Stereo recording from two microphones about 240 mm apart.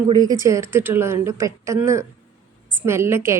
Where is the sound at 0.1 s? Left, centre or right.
Centre.